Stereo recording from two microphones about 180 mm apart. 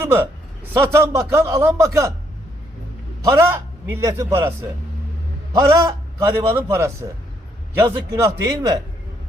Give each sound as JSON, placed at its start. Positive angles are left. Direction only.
{"t": 0.0, "sound": "a man's voice", "side_deg": -10}
{"t": 3.2, "sound": "a man's voice", "side_deg": -15}
{"t": 5.5, "sound": "a man's voice", "side_deg": -15}